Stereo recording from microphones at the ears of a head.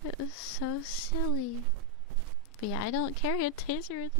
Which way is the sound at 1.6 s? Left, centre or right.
Right.